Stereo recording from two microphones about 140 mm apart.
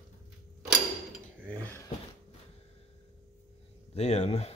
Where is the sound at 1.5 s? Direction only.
15° left (ahead or behind).